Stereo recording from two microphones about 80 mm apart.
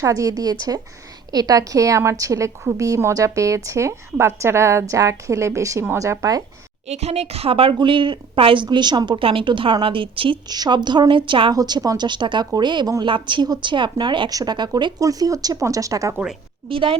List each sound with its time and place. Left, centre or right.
0.0 s a woman's voice: right
7.7 s speech: right
11.1 s a woman's voice: right
11.5 s speech: right
12.0 s speech: right
13.0 s speech: right
14.3 s speech: right
14.9 s speech: right
16.6 s a woman's voice: right